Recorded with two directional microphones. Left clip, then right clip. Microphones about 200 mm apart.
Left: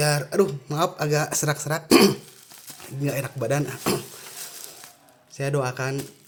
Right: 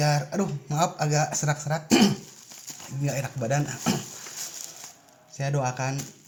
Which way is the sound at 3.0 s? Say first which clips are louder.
Left 3 dB; 25° left (ahead or behind).